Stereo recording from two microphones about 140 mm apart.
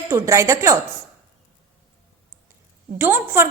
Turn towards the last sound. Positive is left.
turn(degrees=-15)  # may be behind; listen again after turning